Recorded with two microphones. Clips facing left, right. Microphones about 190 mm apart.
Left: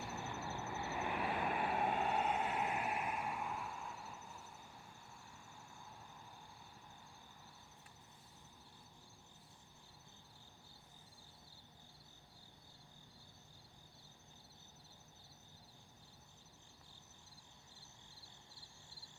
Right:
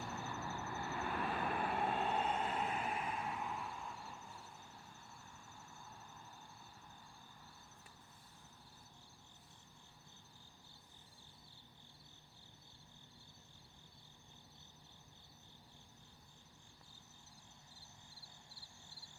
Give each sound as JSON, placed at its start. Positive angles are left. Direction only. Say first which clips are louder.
{"t": 0.2, "sound": "vehicle", "louder": "even", "side_deg": 20}